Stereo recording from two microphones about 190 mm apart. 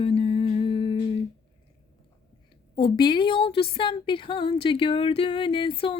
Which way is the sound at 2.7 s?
25° left (ahead or behind).